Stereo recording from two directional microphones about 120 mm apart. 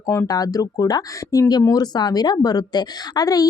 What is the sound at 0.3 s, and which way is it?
Speech, 30° left (ahead or behind).